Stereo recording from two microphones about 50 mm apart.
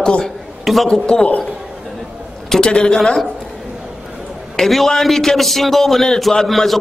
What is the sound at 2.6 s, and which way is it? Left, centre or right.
Speech, centre.